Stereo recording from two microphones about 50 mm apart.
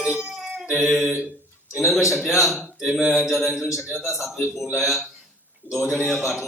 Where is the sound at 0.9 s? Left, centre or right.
Centre.